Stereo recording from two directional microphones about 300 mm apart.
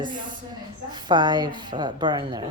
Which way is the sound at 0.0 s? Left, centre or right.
Centre.